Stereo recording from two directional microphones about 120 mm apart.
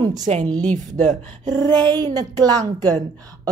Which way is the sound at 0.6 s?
90° right.